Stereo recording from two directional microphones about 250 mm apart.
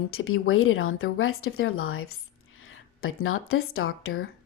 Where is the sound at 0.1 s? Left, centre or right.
Left.